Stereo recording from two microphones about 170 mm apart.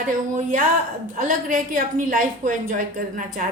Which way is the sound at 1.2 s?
50° right (ahead or behind).